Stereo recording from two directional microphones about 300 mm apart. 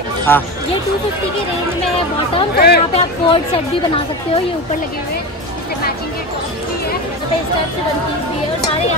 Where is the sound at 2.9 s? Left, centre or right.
Centre.